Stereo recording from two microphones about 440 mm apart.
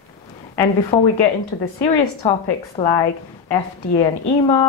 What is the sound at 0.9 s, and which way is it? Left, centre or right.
Speech, centre.